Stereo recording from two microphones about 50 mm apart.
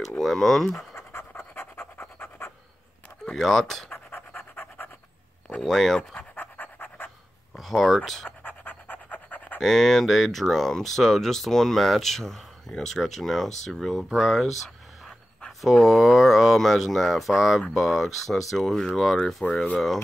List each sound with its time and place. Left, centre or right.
0.2 s speech: centre
0.9 s pant: left
3.3 s speech: centre
5.6 s speech: centre
6.3 s pant: left
7.5 s speech: centre
8.3 s pant: left
9.6 s speech: centre
15.6 s speech: centre